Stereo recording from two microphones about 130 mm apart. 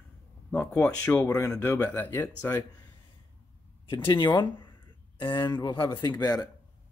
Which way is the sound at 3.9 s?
35° left (ahead or behind).